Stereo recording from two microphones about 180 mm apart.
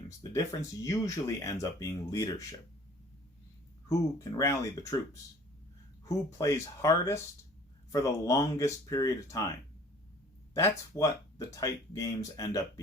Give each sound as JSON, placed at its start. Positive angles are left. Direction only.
{"t": 0.2, "sound": "speech", "side_deg": 20}
{"t": 3.8, "sound": "speech", "side_deg": 15}
{"t": 10.5, "sound": "speech", "side_deg": 20}